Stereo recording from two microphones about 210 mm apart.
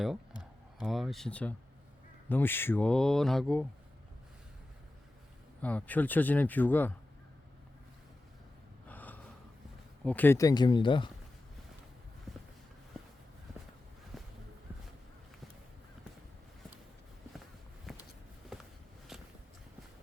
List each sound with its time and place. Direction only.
0.0 s speech: centre (ahead or behind)
5.6 s speech: 5° left (ahead or behind)
8.9 s gasp: 10° left (ahead or behind)
10.0 s speech: 5° left (ahead or behind); by 11.1 s 20° left (ahead or behind)
12.3 s a sound: centre (ahead or behind)
14.1 s walk: centre (ahead or behind)
17.9 s a sound: centre (ahead or behind)